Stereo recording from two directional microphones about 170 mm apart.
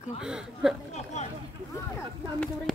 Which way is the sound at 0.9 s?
40° left (ahead or behind).